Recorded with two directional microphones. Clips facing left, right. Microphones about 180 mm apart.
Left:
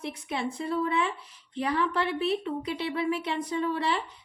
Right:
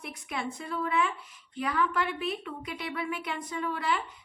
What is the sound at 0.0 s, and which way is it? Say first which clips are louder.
A woman's voice: left 4 dB; 30° left (ahead or behind).